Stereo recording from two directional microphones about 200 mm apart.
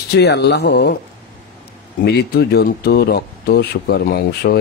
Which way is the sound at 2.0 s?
55° left (ahead or behind).